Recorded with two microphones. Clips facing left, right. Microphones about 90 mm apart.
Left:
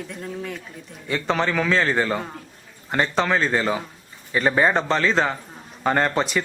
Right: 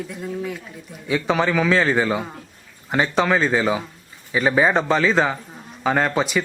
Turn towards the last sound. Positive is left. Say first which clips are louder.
# right 1 dB
turn(degrees=-5)  # may be behind; listen again after turning